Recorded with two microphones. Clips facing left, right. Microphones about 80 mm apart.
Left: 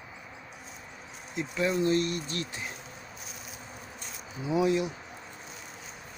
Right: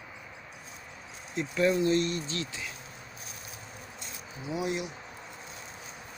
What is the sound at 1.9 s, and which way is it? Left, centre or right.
Speech, right.